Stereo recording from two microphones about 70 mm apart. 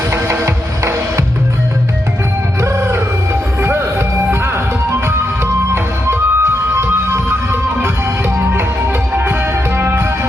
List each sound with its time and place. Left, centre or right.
0.1 s music: right
2.6 s music: right
5.7 s music: right